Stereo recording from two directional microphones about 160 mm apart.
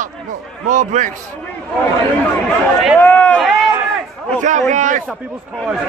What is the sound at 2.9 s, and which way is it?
Run, 10° left (ahead or behind).